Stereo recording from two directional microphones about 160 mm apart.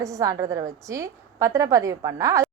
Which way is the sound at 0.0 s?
20° right (ahead or behind).